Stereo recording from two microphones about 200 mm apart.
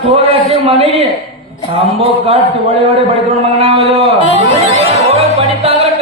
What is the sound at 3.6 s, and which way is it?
Speech, 30° right (ahead or behind).